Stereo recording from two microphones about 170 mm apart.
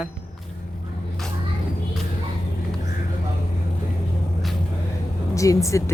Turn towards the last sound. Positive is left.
turn(degrees=20)  # may be behind; listen again after turning